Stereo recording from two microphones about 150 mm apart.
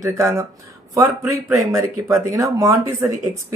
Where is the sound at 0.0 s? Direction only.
20° right (ahead or behind).